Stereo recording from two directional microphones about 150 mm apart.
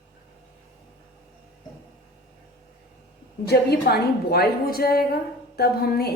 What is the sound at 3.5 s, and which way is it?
A woman's voice, 90° left.